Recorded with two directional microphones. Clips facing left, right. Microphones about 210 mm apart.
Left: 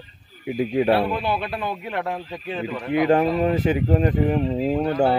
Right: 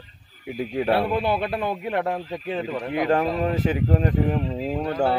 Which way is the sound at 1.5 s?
20° right (ahead or behind).